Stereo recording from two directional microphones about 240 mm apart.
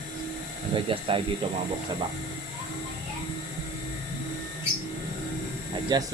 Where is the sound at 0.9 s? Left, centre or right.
Right.